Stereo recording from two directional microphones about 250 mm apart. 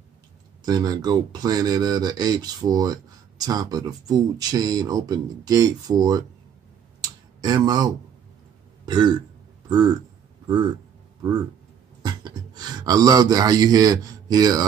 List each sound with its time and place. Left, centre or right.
0.7 s speech: centre
7.0 s clicking: centre
8.8 s burping: centre
10.4 s speech: centre
12.0 s speech: centre